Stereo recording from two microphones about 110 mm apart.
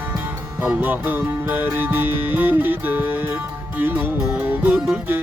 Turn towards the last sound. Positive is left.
turn(degrees=-5)  # may be behind; listen again after turning